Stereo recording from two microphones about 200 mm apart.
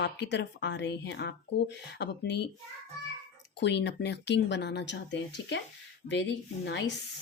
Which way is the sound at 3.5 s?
60° left (ahead or behind).